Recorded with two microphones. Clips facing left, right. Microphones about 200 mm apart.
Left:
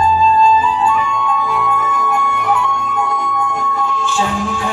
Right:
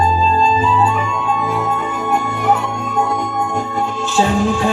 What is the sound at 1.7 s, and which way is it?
Music, 30° right (ahead or behind).